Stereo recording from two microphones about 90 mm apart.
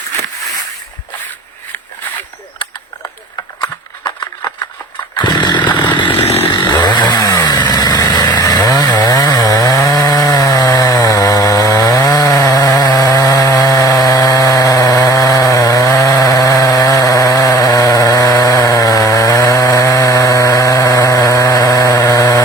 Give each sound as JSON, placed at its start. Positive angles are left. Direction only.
{"t": 5.1, "sound": "chainsaw", "side_deg": 55}
{"t": 6.2, "sound": "chainsaw", "side_deg": 25}
{"t": 6.5, "sound": "chainsaw", "side_deg": 55}